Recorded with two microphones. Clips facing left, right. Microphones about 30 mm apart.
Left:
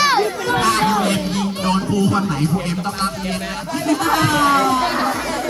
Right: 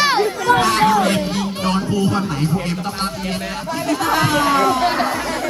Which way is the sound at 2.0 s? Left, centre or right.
Centre.